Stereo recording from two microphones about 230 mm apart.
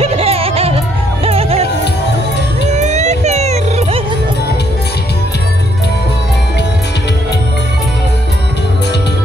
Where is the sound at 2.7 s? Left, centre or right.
Right.